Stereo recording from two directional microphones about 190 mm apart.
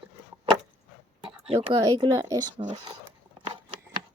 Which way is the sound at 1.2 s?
30° right (ahead or behind).